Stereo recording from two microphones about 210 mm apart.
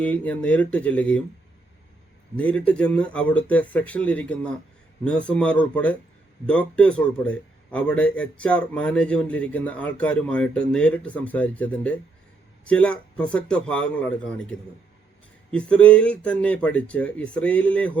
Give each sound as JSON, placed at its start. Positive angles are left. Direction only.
{"t": 0.0, "sound": "speech", "side_deg": 5}
{"t": 2.3, "sound": "a man's voice", "side_deg": 5}
{"t": 15.5, "sound": "a man's voice", "side_deg": 5}